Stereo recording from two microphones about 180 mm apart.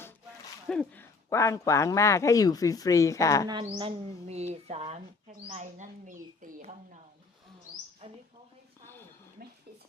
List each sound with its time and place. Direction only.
0.7 s speech: 5° left (ahead or behind)
1.3 s speech: 15° left (ahead or behind)
3.4 s speech: 25° right (ahead or behind)
8.0 s speech: 30° right (ahead or behind)